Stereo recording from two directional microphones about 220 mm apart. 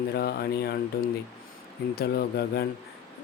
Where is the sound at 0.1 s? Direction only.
45° left (ahead or behind).